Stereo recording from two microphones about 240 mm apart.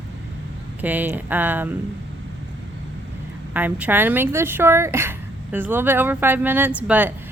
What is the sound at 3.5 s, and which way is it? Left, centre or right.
A woman's voice, centre.